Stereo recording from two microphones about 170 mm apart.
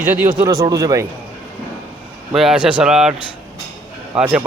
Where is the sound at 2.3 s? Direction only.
Centre (ahead or behind).